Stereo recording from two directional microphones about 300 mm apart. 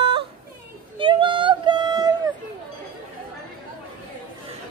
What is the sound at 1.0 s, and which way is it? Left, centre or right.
Child singing, centre.